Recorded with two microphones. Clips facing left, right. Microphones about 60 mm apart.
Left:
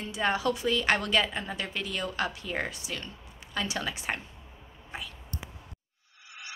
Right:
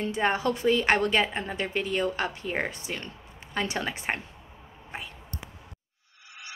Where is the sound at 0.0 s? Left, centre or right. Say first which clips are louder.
Right 2 dB; right.